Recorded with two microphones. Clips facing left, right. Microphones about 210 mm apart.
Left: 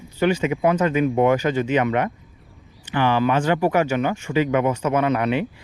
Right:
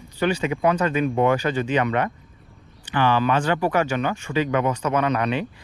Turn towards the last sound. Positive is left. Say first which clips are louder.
# left 2 dB
turn(degrees=15)  # may be behind; listen again after turning